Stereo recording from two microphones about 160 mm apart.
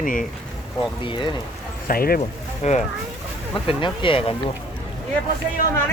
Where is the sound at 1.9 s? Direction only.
65° left (ahead or behind).